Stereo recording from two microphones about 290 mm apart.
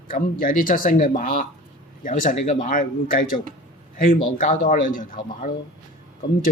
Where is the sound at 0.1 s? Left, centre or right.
Left.